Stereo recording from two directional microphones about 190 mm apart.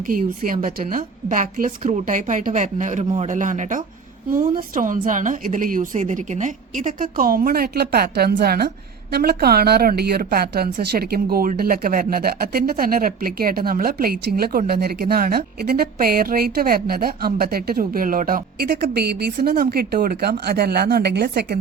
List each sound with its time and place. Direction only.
0.1 s speech: 45° right (ahead or behind)